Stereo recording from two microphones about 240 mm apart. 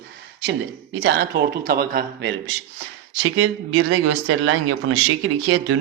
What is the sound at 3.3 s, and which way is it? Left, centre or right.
Speech, right.